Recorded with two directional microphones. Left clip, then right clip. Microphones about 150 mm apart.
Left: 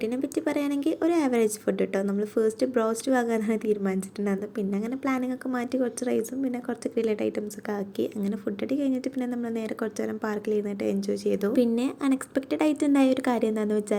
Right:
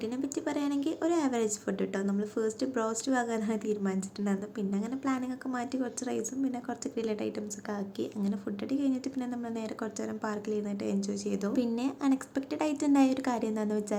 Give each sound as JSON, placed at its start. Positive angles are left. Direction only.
{"t": 0.0, "sound": "a woman's voice", "side_deg": 25}